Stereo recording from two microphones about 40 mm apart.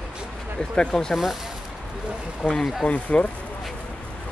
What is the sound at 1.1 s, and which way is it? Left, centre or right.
Speech, centre.